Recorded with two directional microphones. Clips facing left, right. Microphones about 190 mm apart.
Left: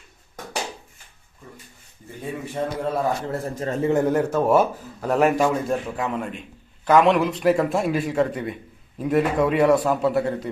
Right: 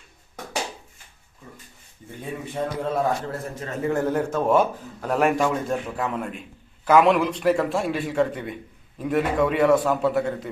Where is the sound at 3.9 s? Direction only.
15° left (ahead or behind).